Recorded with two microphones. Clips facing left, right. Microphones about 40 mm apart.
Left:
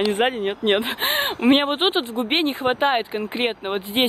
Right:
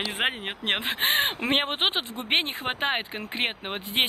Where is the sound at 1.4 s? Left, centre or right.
Centre.